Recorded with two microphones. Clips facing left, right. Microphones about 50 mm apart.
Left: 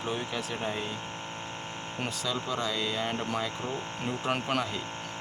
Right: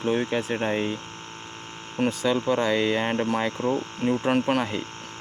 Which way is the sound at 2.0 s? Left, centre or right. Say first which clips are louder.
Right 10 dB; right.